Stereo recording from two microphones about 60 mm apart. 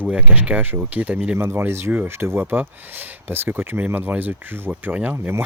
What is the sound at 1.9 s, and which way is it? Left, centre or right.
Speech, right.